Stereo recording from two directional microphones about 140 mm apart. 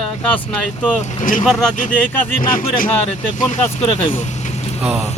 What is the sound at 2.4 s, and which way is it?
Speech, 80° left.